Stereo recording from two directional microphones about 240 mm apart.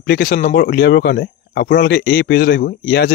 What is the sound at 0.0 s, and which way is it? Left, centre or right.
Speech, left.